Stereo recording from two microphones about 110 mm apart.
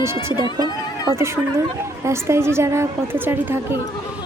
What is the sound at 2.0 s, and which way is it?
A woman's voice, 25° right (ahead or behind).